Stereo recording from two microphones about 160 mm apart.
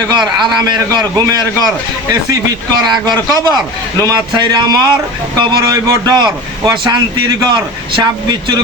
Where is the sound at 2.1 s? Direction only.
25° right (ahead or behind).